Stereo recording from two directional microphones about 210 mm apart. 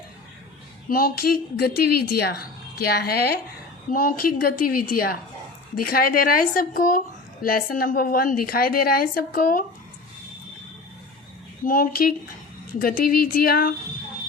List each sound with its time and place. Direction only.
0.9 s a woman's voice: 45° left (ahead or behind)
11.6 s a woman's voice: 40° left (ahead or behind)